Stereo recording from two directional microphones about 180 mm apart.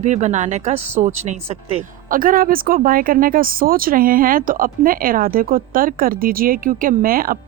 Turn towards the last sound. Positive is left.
turn(degrees=-55)  # may be behind; listen again after turning